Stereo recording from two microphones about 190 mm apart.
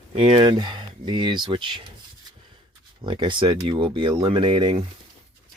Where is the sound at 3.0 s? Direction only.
25° right (ahead or behind).